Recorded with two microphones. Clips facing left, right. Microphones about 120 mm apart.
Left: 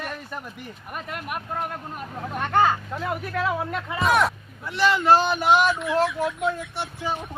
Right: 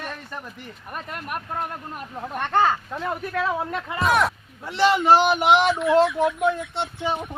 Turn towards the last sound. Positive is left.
turn(degrees=-25)  # may be behind; listen again after turning